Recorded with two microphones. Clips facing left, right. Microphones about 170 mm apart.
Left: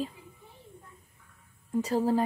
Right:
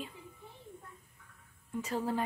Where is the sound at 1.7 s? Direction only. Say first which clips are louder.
Left 8 dB; 35° left (ahead or behind).